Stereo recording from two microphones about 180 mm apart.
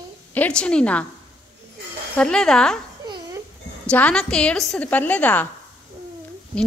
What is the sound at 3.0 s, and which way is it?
Dog, 25° right (ahead or behind).